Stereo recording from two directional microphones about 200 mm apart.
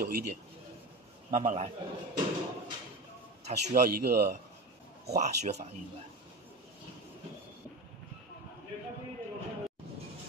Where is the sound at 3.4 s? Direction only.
35° right (ahead or behind).